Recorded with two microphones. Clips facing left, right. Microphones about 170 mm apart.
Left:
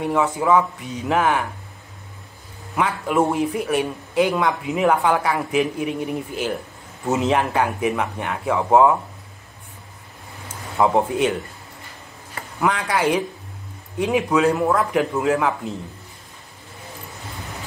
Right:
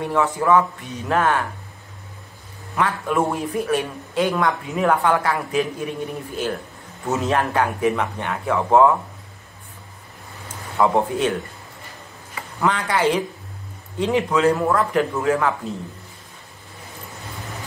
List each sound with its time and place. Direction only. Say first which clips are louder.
0.0 s speech: even; 15° left (ahead or behind)
3.1 s speech: left 2 dB; 15° left (ahead or behind)
10.8 s speech: left 1 dB; 15° left (ahead or behind)
12.5 s speech: even; 10° left (ahead or behind)